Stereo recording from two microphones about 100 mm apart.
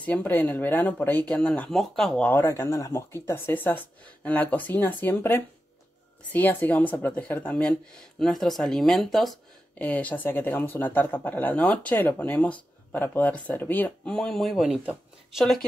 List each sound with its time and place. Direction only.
0.0 s speech: 15° left (ahead or behind)
2.2 s speech: 25° left (ahead or behind); by 9.4 s centre (ahead or behind)
9.8 s speech: 15° left (ahead or behind)
14.1 s speech: 5° left (ahead or behind)